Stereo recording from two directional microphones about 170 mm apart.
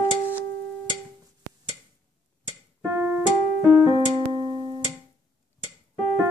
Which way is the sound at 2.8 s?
15° right (ahead or behind).